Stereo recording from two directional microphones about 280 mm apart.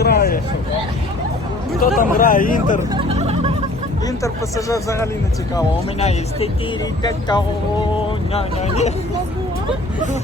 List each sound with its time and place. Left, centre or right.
0.0 s vehicle: left
2.0 s speech: left
2.9 s a sound: centre
4.0 s speech: centre
6.0 s speech: left